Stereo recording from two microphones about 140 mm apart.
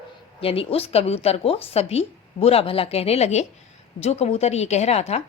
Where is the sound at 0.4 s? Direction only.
45° left (ahead or behind).